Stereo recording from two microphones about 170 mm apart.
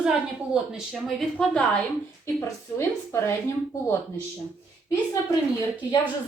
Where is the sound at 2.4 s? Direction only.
15° left (ahead or behind).